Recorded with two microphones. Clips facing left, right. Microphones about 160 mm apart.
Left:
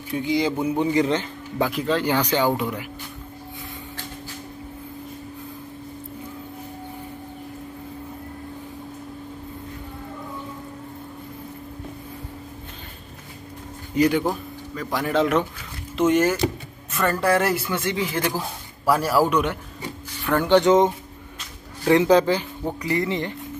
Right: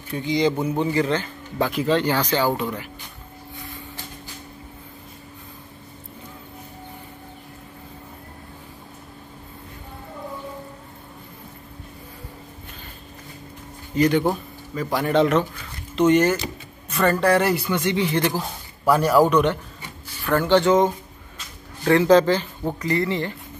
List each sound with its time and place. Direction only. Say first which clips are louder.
0.1 s a man's voice: right 1 dB; 5° left (ahead or behind)
1.7 s speech: right 5 dB; centre (ahead or behind)
2.0 s a man's voice: even; 15° left (ahead or behind)
13.9 s a man's voice: right 1 dB; 10° left (ahead or behind)
14.2 s a man's voice: right 2 dB; centre (ahead or behind); by 23.3 s 15° left (ahead or behind)